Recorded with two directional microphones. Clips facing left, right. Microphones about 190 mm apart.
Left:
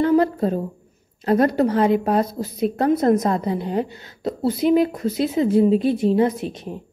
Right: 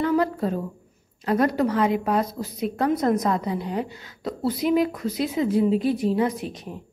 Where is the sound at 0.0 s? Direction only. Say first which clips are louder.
Left 5 dB; 30° left (ahead or behind).